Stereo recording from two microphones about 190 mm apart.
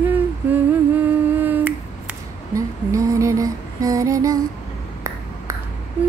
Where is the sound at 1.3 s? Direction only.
10° right (ahead or behind).